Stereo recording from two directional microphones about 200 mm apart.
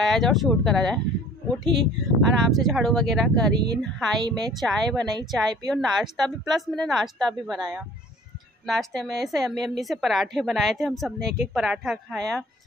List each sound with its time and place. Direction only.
0.0 s a woman's voice: centre (ahead or behind)
4.2 s a woman's voice: 20° right (ahead or behind)
4.6 s a woman's voice: centre (ahead or behind)
8.6 s a woman's voice: centre (ahead or behind)